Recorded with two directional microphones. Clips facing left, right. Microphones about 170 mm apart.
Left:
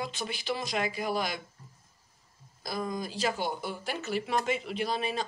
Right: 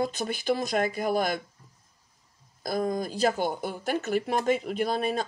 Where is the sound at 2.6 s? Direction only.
50° right (ahead or behind).